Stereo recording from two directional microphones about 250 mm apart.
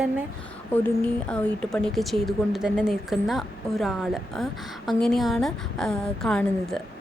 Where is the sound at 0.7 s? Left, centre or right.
Centre.